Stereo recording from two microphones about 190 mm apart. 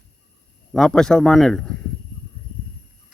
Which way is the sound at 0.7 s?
Centre (ahead or behind).